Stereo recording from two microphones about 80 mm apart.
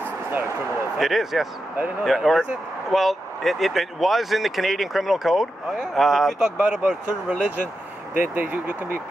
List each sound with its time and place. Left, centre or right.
0.9 s speech: centre; by 8.9 s right